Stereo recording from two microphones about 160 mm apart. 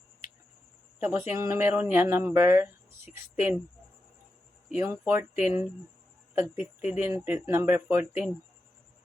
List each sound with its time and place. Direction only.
0.9 s speech: 15° right (ahead or behind)
4.7 s speech: 15° right (ahead or behind)